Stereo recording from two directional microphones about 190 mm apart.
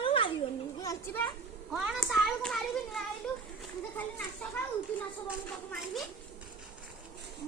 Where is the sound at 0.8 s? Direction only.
15° left (ahead or behind).